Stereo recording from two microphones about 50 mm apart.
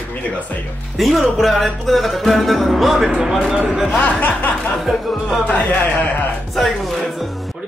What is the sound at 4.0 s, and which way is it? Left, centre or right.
Speech, left.